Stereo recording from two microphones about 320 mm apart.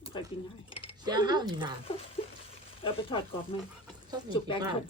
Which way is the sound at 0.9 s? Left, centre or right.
Centre.